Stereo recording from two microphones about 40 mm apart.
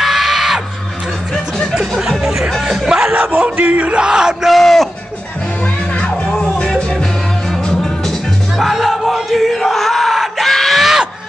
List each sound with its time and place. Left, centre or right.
0.0 s music: centre
2.0 s music: centre
3.2 s a sound: right
3.6 s yell: right
4.0 s yell: centre
4.5 s a sound: centre
6.2 s music: centre
8.5 s crowd: centre
10.4 s screaming: centre
10.8 s music: centre